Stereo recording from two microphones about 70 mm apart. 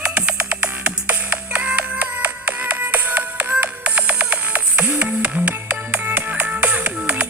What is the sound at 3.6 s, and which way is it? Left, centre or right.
Music, right.